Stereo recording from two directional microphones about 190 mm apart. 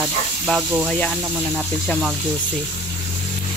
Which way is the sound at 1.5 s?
Centre (ahead or behind).